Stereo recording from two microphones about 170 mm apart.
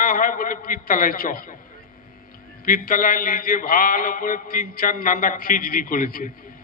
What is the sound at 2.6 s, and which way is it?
A man's voice, 55° left (ahead or behind).